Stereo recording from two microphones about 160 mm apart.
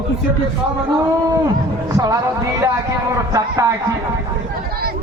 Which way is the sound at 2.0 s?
20° right (ahead or behind).